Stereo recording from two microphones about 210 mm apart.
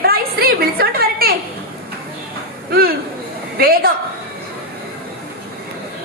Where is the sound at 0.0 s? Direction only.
45° right (ahead or behind).